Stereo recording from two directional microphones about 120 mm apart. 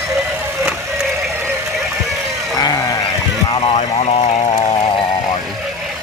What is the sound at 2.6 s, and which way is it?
Sheep, 30° left (ahead or behind).